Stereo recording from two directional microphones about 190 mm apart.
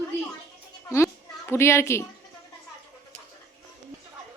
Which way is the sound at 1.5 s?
15° left (ahead or behind).